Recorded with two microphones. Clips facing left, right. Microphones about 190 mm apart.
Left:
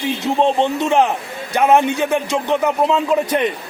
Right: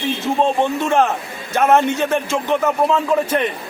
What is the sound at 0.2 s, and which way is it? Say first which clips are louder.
A man's voice: left 2 dB; 20° left (ahead or behind).